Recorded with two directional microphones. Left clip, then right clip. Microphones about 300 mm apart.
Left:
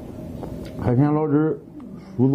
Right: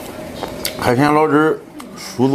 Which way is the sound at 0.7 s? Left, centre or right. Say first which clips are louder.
Right 8 dB; centre.